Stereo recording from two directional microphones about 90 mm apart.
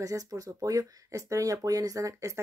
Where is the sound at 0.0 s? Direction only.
40° right (ahead or behind).